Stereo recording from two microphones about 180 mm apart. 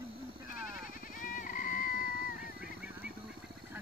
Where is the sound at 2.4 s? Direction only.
5° right (ahead or behind).